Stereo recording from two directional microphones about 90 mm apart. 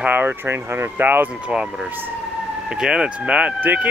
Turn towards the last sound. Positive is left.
turn(degrees=-20)  # may be behind; listen again after turning